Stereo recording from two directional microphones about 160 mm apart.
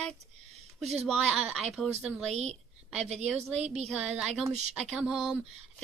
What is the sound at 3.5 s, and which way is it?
Speech, 40° right (ahead or behind).